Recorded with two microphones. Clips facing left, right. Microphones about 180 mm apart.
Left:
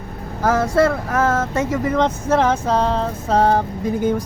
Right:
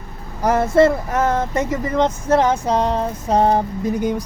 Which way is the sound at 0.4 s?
20° right (ahead or behind).